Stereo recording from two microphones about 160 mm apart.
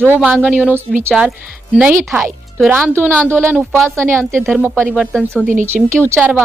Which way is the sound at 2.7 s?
15° right (ahead or behind).